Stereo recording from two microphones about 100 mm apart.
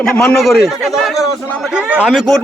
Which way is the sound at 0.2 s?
5° left (ahead or behind).